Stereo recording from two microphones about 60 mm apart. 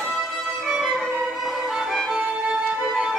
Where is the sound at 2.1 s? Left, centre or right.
Right.